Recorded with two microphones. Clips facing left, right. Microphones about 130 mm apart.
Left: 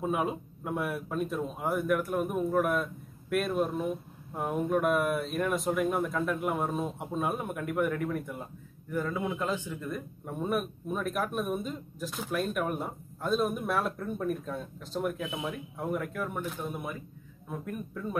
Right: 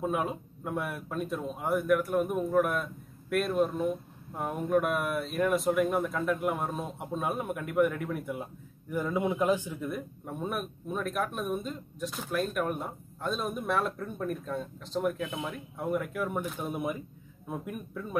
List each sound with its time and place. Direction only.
0.0 s a man's voice: centre (ahead or behind)
8.9 s a man's voice: 15° right (ahead or behind)
16.7 s speech: 15° right (ahead or behind)